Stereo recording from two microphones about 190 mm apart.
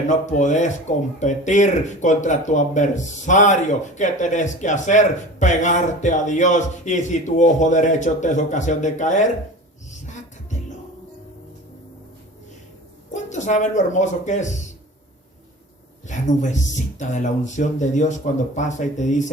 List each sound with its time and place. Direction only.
0.1 s speech: 40° left (ahead or behind)
13.1 s speech: 40° left (ahead or behind)
16.0 s speech: 40° left (ahead or behind)